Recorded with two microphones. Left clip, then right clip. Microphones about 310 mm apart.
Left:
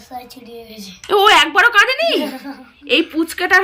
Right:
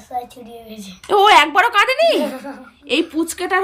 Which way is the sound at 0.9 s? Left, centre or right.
Centre.